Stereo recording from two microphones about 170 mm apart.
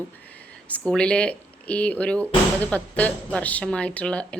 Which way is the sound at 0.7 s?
5° left (ahead or behind).